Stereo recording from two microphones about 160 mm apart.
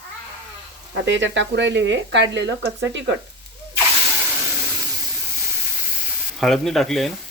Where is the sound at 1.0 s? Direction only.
90° right.